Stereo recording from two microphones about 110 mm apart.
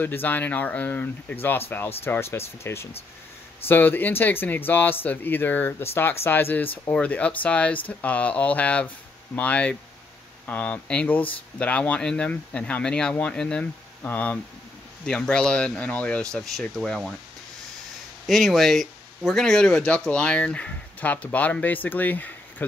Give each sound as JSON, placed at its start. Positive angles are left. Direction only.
{"t": 0.0, "sound": "speech", "side_deg": 20}
{"t": 18.2, "sound": "speech", "side_deg": 0}